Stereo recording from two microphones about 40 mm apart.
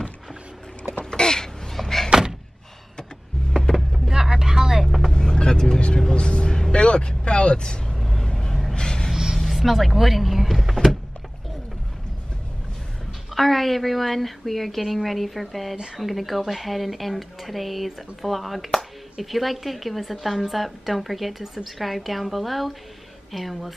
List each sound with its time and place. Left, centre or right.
1.1 s a sound: centre
1.8 s door: centre
4.1 s vehicle: centre
4.8 s vehicle: centre
5.1 s vehicle: centre
8.0 s vehicle: centre
8.3 s gasp: centre
8.7 s a sound: centre
9.1 s a sound: centre
9.4 s power windows: centre
13.3 s a woman's voice: centre